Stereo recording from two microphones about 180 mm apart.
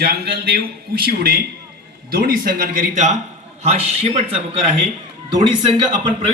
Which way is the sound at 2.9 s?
40° right (ahead or behind).